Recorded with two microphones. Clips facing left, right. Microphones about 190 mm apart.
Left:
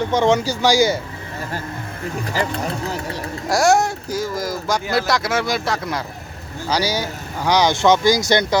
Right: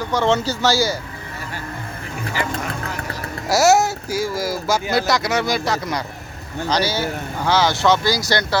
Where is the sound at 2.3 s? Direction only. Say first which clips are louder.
Left 1 dB; 35° left (ahead or behind).